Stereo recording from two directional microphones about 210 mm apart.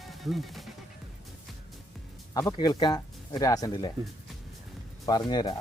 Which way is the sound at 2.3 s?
15° left (ahead or behind).